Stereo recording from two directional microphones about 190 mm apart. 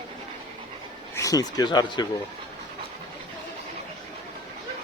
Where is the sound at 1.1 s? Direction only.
15° left (ahead or behind).